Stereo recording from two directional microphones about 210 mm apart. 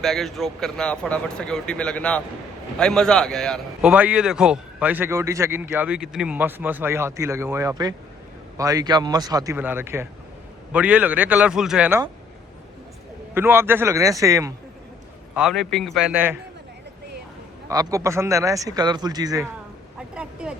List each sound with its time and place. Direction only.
0.0 s a man's voice: centre (ahead or behind)
13.3 s a man's voice: 10° right (ahead or behind)
15.4 s speech: centre (ahead or behind)
17.7 s a man's voice: 15° right (ahead or behind)
20.0 s a sound: 5° right (ahead or behind)